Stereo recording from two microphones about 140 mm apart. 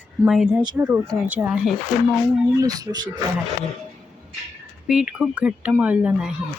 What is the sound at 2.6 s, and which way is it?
Speech, 25° right (ahead or behind).